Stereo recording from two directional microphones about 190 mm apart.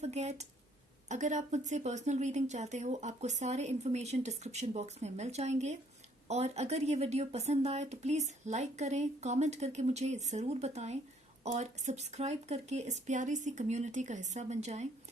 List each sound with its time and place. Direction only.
0.0 s a woman's voice: 35° right (ahead or behind)